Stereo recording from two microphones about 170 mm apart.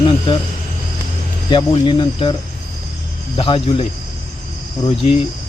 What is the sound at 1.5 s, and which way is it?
Speech, 30° left (ahead or behind).